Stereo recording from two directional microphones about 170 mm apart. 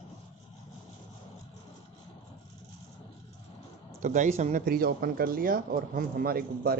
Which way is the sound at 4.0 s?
50° right (ahead or behind).